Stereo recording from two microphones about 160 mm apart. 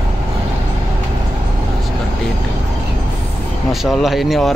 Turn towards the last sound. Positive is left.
turn(degrees=0)  # may be behind; listen again after turning